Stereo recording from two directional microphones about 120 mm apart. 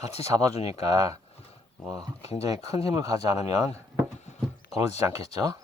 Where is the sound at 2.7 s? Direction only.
30° right (ahead or behind).